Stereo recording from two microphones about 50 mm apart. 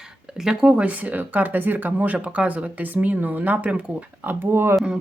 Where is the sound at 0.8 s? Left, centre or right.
Right.